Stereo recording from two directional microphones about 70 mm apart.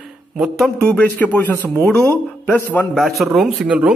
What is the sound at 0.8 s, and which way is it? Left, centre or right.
Speech, centre.